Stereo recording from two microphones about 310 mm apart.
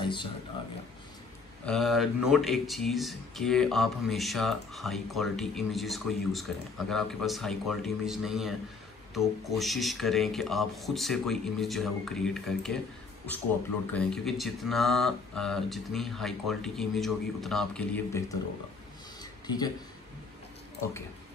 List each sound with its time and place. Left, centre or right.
0.0 s speech: centre
1.7 s speech: centre
13.9 s speech: centre
19.4 s speech: centre